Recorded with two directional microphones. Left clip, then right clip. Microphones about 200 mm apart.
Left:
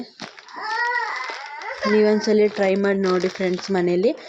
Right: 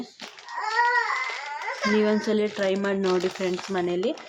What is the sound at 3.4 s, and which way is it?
Speech, 15° left (ahead or behind).